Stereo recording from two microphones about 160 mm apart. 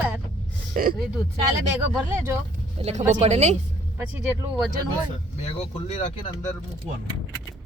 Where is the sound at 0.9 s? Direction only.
Centre (ahead or behind).